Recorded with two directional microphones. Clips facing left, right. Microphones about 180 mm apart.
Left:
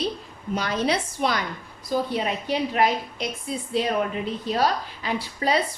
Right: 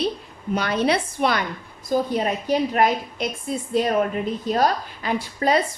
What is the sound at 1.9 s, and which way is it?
A woman's voice, 45° right (ahead or behind).